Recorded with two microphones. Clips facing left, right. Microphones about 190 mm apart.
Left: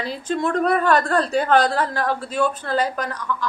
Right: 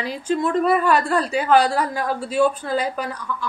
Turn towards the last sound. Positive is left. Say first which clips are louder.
# left 1 dB
turn(degrees=-10)  # may be behind; listen again after turning